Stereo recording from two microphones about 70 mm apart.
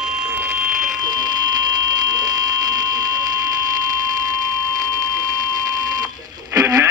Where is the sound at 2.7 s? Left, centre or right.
Right.